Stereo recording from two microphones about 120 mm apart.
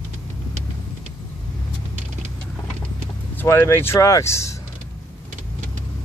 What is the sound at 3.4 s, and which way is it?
Speech, 20° left (ahead or behind).